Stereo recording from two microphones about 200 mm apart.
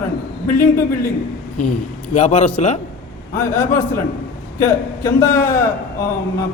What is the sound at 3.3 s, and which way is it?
A man's voice, 10° left (ahead or behind).